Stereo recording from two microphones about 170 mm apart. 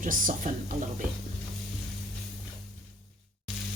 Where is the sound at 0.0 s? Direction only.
50° right (ahead or behind).